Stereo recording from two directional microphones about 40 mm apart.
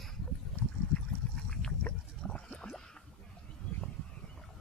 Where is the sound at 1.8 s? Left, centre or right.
Left.